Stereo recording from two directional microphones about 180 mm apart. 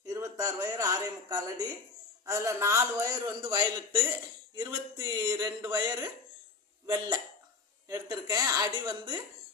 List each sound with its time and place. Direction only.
0.0 s a man's voice: 20° right (ahead or behind)